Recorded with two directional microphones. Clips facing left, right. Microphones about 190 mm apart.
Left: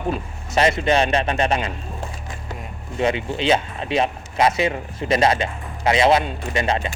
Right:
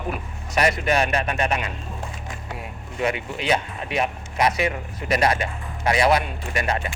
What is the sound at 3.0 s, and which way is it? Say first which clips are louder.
Speech: left 4 dB; 30° left (ahead or behind).